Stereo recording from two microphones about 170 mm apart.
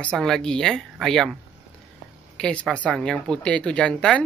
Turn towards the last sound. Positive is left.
turn(degrees=5)  # may be behind; listen again after turning